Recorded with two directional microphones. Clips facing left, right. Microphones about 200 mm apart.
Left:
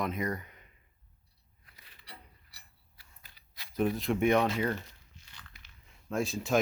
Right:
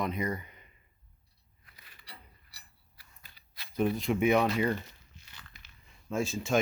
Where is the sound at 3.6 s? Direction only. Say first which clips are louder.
Right 1 dB; 20° left (ahead or behind).